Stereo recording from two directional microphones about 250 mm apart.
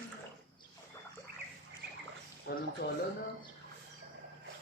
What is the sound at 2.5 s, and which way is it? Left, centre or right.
Speech, left.